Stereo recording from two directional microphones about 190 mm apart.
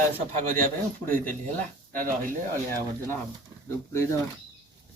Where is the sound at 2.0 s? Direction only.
45° right (ahead or behind).